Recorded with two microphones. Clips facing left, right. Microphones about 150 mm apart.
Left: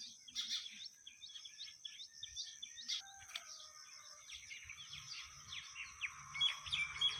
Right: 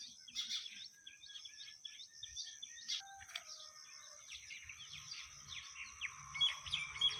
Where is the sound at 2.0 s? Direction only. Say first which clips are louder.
Even; 45° right (ahead or behind).